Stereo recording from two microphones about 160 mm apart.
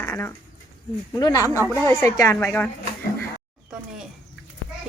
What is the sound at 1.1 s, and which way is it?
A woman's voice, 20° left (ahead or behind).